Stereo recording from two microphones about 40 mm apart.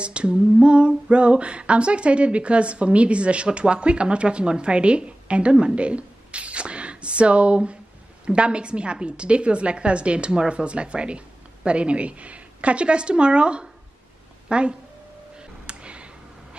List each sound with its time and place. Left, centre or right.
0.0 s female singing: right
5.8 s a sound: right
8.3 s female singing: right
10.5 s speech: right
14.5 s female singing: right
15.6 s a sound: right